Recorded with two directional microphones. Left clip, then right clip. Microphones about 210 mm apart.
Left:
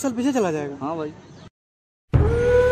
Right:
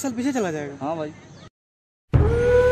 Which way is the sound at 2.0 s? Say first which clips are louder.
Even; centre (ahead or behind).